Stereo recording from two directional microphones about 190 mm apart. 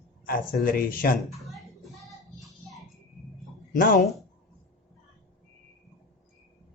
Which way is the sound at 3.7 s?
50° left (ahead or behind).